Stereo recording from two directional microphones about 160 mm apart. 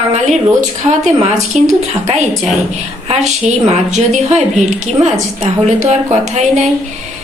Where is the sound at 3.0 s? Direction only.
45° right (ahead or behind).